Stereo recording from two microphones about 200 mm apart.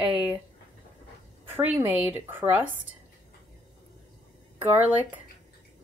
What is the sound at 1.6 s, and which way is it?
A woman's voice, 10° right (ahead or behind).